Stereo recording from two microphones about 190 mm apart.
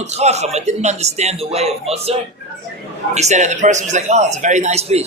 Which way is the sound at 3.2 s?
40° right (ahead or behind).